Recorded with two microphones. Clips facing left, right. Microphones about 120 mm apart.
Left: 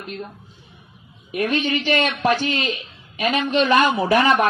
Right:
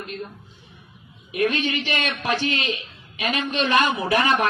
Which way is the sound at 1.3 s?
45° left (ahead or behind).